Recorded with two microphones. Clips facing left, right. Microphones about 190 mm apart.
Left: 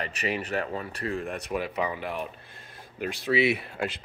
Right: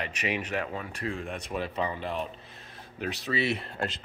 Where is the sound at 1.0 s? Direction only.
5° left (ahead or behind).